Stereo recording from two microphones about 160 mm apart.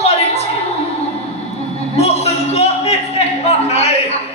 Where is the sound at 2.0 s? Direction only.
40° left (ahead or behind).